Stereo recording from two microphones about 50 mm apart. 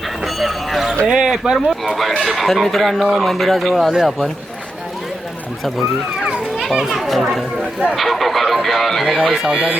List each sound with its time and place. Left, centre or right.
0.3 s a sound: centre
1.0 s speech: centre
1.5 s speech: centre
6.6 s speech: centre
9.0 s speech: centre